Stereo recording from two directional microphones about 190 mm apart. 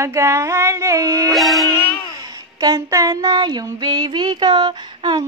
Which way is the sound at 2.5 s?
20° right (ahead or behind).